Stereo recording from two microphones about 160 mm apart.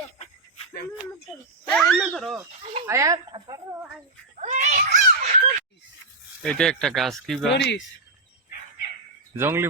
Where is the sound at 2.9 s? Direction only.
20° right (ahead or behind).